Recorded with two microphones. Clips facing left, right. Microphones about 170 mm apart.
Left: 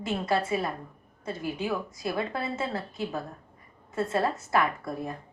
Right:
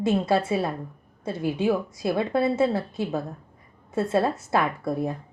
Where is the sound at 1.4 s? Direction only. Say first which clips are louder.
Right 8 dB; 25° right (ahead or behind).